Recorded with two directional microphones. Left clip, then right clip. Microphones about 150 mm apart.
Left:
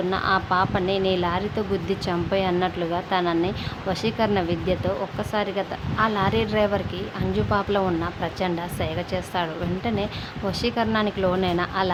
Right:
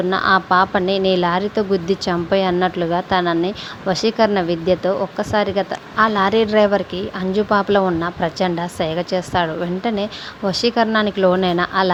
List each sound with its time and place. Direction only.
0.1 s speech: 40° right (ahead or behind)